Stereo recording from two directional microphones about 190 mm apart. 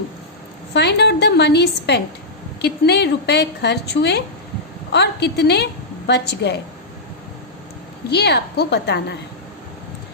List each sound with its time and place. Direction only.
0.7 s a woman's voice: 65° left (ahead or behind)
8.1 s a woman's voice: 60° left (ahead or behind)